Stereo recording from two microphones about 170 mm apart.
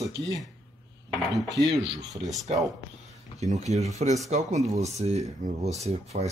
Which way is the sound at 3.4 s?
40° right (ahead or behind).